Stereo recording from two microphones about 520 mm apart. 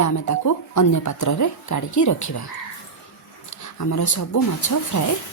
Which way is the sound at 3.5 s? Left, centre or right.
Left.